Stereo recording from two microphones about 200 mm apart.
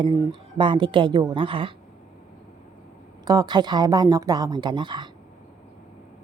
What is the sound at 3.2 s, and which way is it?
A woman's voice, 20° right (ahead or behind).